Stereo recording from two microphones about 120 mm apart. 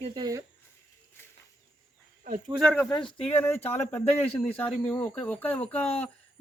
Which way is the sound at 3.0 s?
55° left (ahead or behind).